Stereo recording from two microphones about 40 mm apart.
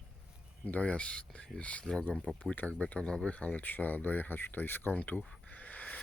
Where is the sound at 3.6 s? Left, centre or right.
Left.